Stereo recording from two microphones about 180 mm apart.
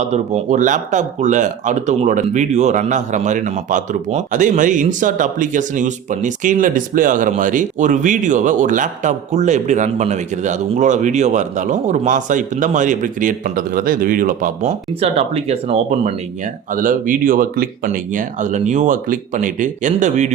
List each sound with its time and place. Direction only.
0.0 s speech: 40° right (ahead or behind)
16.7 s speech: 50° right (ahead or behind)